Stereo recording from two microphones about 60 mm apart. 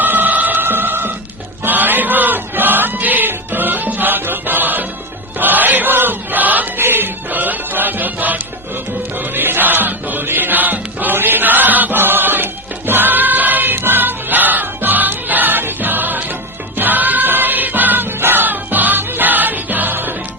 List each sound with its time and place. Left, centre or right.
0.0 s emergency vehicle: right
1.6 s chant: right
9.3 s music: right